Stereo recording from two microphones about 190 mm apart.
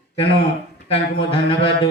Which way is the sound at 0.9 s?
30° left (ahead or behind).